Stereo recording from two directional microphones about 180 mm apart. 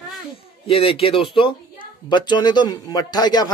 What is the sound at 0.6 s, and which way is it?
A man's voice, 30° left (ahead or behind).